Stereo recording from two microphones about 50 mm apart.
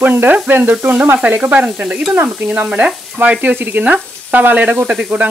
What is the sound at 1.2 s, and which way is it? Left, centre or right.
Speech, right.